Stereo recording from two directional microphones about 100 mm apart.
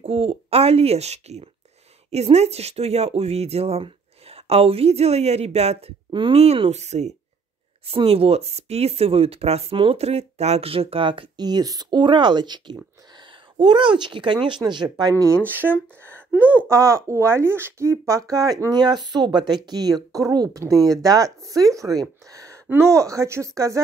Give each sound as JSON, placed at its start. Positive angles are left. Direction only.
{"t": 0.0, "sound": "speech", "side_deg": -70}
{"t": 7.8, "sound": "speech", "side_deg": -70}
{"t": 15.5, "sound": "speech", "side_deg": -20}
{"t": 16.7, "sound": "speech", "side_deg": -30}
{"t": 22.3, "sound": "a sound", "side_deg": -35}
{"t": 22.7, "sound": "speech", "side_deg": -25}